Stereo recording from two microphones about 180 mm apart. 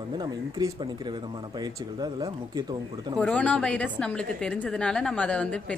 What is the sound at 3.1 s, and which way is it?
A woman's voice, 5° left (ahead or behind).